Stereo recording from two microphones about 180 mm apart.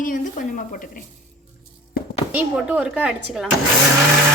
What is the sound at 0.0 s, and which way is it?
Speech, 45° left (ahead or behind).